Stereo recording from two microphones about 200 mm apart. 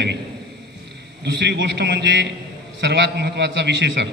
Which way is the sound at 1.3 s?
60° right (ahead or behind).